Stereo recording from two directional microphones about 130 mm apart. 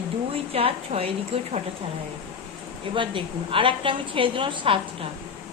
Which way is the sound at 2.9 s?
40° right (ahead or behind).